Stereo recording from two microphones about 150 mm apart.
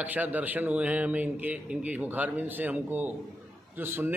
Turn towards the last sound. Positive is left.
turn(degrees=-15)  # may be behind; listen again after turning